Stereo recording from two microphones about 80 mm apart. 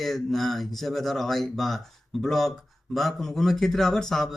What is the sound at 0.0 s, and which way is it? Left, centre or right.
Speech, centre.